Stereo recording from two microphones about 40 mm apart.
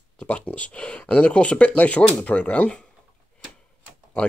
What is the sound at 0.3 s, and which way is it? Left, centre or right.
Speech, left.